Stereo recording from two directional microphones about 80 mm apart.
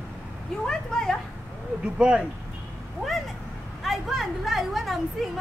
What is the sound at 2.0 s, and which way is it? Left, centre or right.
Speech, centre.